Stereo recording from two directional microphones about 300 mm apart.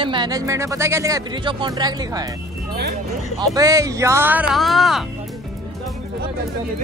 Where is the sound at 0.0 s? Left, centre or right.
Centre.